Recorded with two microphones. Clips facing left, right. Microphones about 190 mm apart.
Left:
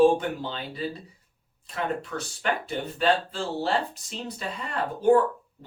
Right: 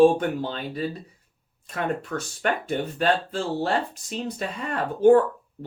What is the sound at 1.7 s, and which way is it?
Speech, 45° right (ahead or behind).